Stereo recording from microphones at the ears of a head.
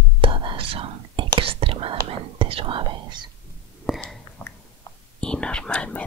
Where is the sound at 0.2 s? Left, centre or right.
Right.